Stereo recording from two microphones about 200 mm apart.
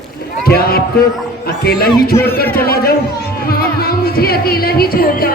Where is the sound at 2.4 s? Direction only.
10° left (ahead or behind).